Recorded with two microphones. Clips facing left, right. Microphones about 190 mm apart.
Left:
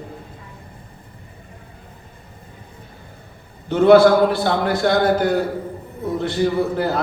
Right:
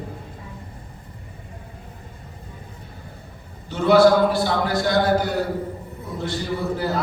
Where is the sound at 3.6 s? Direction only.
55° left (ahead or behind).